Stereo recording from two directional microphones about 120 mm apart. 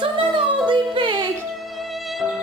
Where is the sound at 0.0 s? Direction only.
45° right (ahead or behind).